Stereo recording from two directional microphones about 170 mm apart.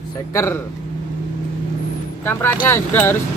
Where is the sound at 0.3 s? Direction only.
15° left (ahead or behind).